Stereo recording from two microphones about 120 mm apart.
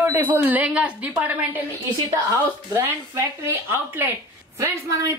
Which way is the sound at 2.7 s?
20° right (ahead or behind).